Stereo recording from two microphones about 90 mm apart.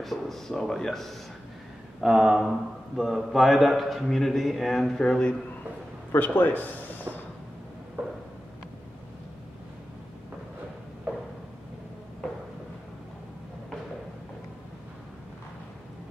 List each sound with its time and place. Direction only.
0.0 s a man's voice: 5° left (ahead or behind)
6.1 s a man's voice: 20° left (ahead or behind)
8.0 s a sound: 15° right (ahead or behind)